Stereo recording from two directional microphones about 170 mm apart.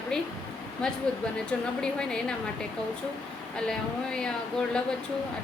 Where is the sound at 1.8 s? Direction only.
5° left (ahead or behind).